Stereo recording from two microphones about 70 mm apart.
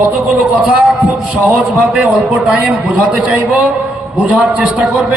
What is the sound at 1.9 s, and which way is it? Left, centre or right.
A man's voice, right.